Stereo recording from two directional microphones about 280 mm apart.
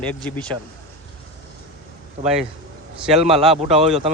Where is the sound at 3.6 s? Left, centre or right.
Right.